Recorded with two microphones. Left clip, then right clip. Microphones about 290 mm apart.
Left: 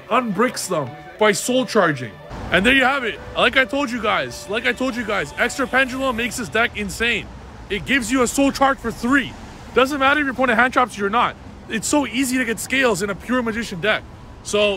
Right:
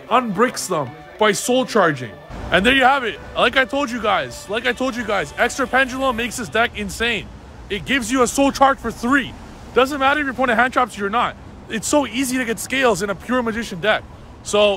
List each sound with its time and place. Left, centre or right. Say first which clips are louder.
0.1 s speech: right 2 dB; centre